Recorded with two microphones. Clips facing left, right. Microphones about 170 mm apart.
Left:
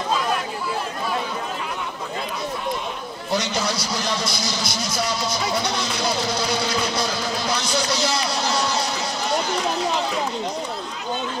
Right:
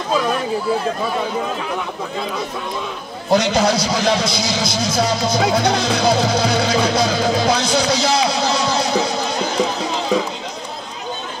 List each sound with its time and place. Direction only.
3.3 s speech: 90° right